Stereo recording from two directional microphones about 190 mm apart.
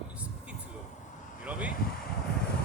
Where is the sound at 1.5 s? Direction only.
5° right (ahead or behind).